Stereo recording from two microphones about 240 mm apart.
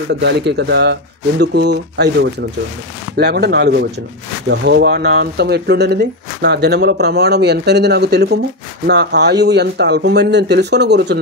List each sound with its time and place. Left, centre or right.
0.1 s speech: right
3.2 s speech: right